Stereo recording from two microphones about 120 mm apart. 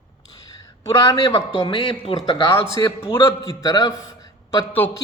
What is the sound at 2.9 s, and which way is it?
Speech, 50° left (ahead or behind).